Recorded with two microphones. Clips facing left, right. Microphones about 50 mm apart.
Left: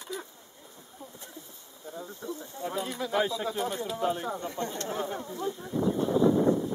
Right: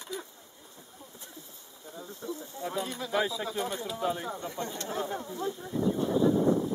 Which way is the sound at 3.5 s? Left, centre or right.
Centre.